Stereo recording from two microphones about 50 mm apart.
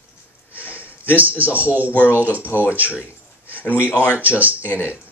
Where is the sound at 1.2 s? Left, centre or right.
Right.